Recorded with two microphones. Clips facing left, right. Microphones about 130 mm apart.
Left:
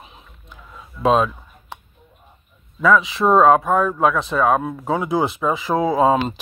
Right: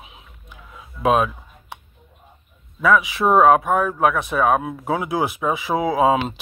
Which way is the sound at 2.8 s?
10° right (ahead or behind).